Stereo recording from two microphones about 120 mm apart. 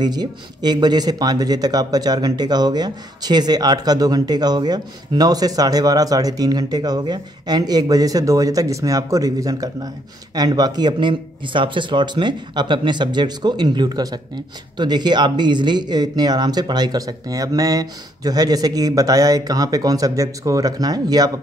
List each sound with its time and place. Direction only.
0.0 s speech: 35° right (ahead or behind)